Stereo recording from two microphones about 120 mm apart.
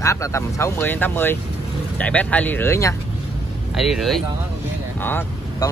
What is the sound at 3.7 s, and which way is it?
Speech, 5° right (ahead or behind).